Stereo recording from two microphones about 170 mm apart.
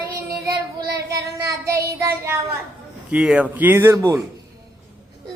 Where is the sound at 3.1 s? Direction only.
5° right (ahead or behind).